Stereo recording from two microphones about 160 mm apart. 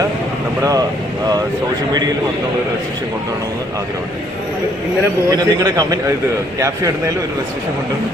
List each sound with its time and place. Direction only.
0.6 s a man's voice: 20° right (ahead or behind)
5.3 s a man's voice: 20° right (ahead or behind)